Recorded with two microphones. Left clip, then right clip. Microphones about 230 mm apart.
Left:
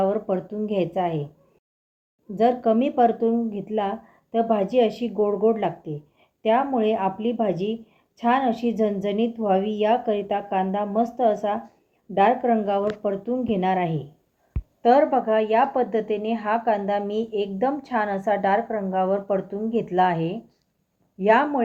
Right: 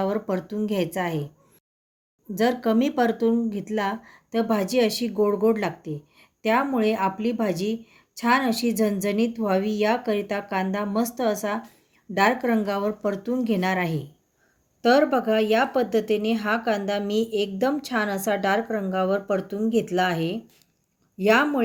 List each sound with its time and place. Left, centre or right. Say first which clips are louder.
0.0 s speech: left 3 dB; right
2.3 s speech: left 3 dB; right
14.8 s speech: left 2 dB; right